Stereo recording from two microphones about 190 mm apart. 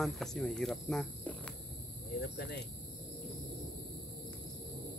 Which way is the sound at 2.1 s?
55° left (ahead or behind).